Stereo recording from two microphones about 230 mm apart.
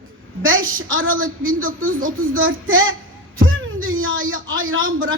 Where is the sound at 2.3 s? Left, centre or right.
Right.